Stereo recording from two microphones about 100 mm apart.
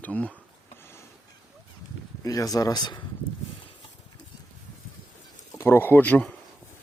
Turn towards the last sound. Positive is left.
turn(degrees=15)  # may be behind; listen again after turning